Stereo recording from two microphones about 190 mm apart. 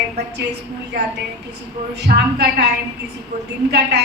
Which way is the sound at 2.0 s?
60° right (ahead or behind).